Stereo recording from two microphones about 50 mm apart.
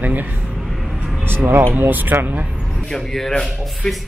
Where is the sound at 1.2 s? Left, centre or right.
Right.